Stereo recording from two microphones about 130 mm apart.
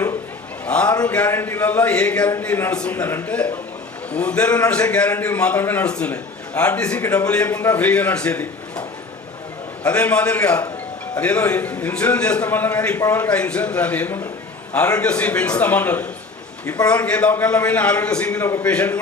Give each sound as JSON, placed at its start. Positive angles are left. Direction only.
{"t": 0.6, "sound": "a sound", "side_deg": 10}
{"t": 1.0, "sound": "a man's voice", "side_deg": 10}
{"t": 9.8, "sound": "a man's voice", "side_deg": 10}
{"t": 13.0, "sound": "a man's voice", "side_deg": 25}
{"t": 13.3, "sound": "a man's voice", "side_deg": 10}
{"t": 18.4, "sound": "a man's voice", "side_deg": 20}
{"t": 18.7, "sound": "a man's voice", "side_deg": 10}